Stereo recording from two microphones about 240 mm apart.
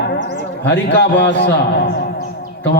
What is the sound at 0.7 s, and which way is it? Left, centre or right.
Speech, left.